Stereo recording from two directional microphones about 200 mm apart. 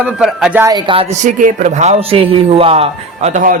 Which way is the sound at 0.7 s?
25° right (ahead or behind).